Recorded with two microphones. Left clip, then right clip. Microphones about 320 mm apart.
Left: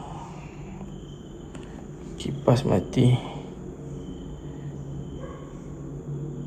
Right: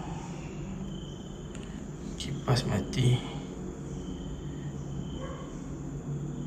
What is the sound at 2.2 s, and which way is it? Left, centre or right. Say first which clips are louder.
Speech: left 9 dB; centre.